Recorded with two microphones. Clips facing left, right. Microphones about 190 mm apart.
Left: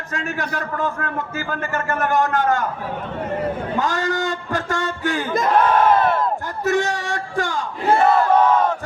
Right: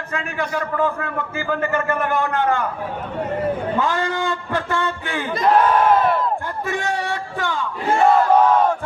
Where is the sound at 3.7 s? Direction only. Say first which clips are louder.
Even; 45° left (ahead or behind).